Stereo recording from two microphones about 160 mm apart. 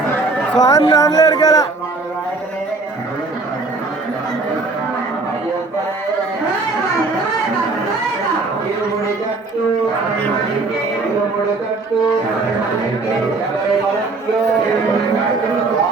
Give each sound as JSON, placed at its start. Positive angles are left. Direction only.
{"t": 0.6, "sound": "speech", "side_deg": 20}